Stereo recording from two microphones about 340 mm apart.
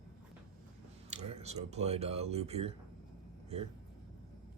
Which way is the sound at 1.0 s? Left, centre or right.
Centre.